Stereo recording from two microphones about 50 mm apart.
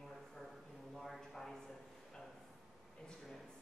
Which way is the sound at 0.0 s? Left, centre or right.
Centre.